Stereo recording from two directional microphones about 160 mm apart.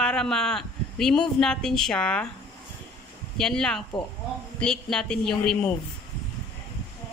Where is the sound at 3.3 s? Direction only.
5° left (ahead or behind).